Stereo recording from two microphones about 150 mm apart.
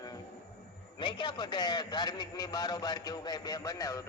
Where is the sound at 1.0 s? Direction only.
30° left (ahead or behind).